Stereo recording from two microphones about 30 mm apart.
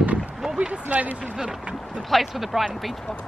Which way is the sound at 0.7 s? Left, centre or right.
Right.